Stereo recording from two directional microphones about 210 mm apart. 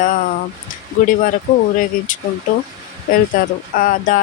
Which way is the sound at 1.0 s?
40° left (ahead or behind).